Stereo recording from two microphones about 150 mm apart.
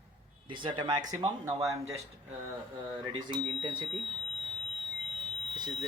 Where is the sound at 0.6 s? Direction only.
30° right (ahead or behind).